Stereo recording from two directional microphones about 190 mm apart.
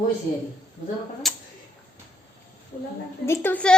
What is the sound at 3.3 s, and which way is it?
Speech, 10° left (ahead or behind).